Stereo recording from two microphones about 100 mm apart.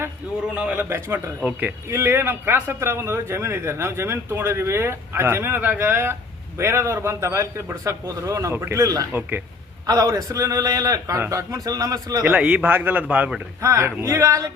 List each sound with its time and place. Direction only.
0.5 s a man's voice: 15° right (ahead or behind)
0.9 s a man's voice: 25° right (ahead or behind)
12.2 s a man's voice: 10° right (ahead or behind)
13.6 s a man's voice: 30° right (ahead or behind)